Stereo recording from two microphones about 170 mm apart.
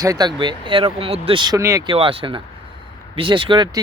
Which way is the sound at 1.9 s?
30° right (ahead or behind).